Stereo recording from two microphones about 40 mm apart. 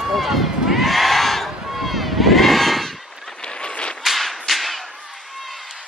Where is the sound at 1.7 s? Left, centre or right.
Centre.